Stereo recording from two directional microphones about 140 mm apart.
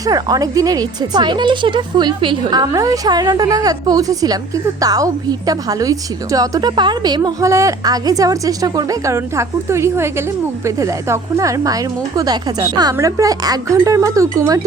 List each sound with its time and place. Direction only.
0.0 s a woman's voice: 25° right (ahead or behind)